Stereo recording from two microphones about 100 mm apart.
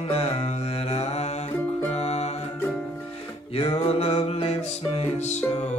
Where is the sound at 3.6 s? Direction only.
75° left (ahead or behind).